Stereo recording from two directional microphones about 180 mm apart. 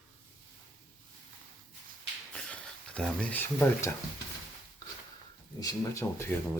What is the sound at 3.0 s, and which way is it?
Speech, 5° left (ahead or behind).